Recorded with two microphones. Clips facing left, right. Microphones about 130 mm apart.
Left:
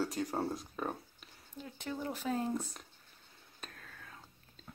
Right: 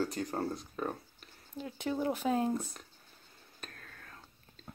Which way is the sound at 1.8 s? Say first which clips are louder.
Right 7 dB; 60° right (ahead or behind).